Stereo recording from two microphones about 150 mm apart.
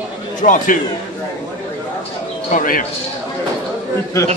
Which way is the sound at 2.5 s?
65° left (ahead or behind).